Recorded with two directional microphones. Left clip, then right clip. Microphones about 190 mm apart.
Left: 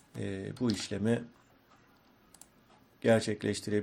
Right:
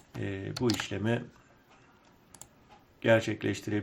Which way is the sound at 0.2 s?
35° left (ahead or behind).